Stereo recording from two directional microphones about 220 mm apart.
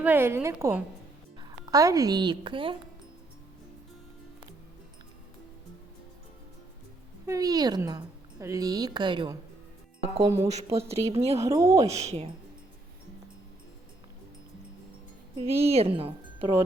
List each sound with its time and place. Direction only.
0.0 s a woman's voice: 10° right (ahead or behind)
7.3 s a woman's voice: 15° right (ahead or behind)
10.4 s speech: 30° right (ahead or behind)
11.3 s a woman's voice: 15° right (ahead or behind)
11.9 s speech: 30° right (ahead or behind)
15.4 s a woman's voice: 25° right (ahead or behind)